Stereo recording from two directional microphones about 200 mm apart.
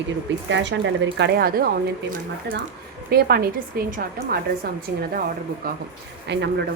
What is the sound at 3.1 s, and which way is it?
A woman's voice, 50° right (ahead or behind).